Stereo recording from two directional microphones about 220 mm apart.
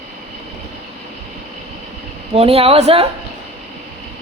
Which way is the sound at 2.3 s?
25° right (ahead or behind).